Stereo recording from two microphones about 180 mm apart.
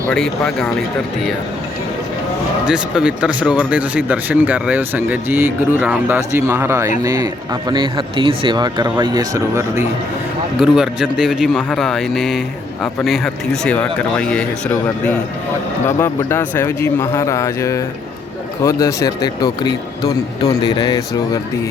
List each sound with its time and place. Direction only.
0.1 s speech: 5° left (ahead or behind)
2.6 s speech: 5° right (ahead or behind)
10.6 s speech: 5° right (ahead or behind); by 21.0 s 20° left (ahead or behind)